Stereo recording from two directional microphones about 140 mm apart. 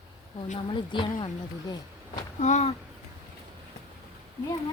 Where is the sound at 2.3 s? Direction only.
60° left (ahead or behind).